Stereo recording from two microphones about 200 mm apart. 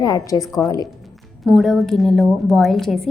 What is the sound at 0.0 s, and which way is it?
Speech, 15° left (ahead or behind).